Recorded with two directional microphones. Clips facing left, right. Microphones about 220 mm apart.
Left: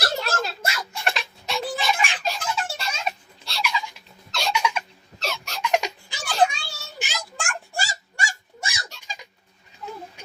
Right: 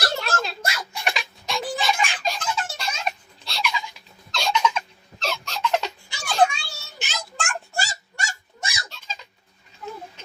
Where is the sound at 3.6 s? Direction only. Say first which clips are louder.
Left 1 dB; 10° left (ahead or behind).